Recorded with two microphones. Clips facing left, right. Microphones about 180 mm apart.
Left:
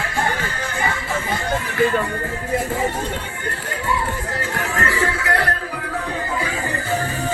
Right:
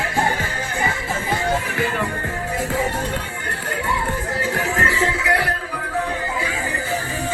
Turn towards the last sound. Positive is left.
turn(degrees=-15)  # may be behind; listen again after turning